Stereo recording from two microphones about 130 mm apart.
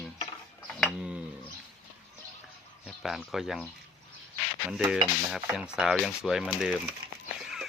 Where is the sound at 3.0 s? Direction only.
Centre (ahead or behind).